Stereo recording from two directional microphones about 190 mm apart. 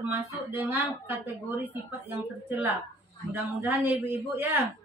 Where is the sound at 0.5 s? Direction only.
10° right (ahead or behind).